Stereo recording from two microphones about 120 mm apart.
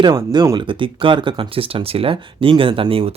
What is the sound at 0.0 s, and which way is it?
Speech, 40° right (ahead or behind).